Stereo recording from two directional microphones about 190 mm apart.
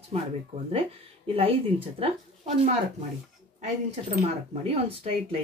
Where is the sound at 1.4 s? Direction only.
30° right (ahead or behind).